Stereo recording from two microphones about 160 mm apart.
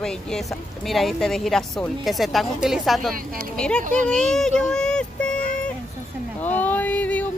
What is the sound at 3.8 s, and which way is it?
Speech, 55° right (ahead or behind).